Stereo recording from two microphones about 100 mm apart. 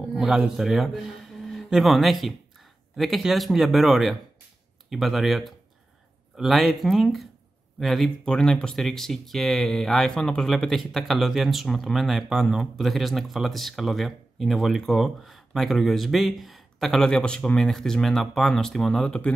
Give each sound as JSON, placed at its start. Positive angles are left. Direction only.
{"t": 0.1, "sound": "a man's voice", "side_deg": -5}